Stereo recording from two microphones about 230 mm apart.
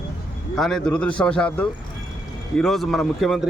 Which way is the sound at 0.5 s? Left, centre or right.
Centre.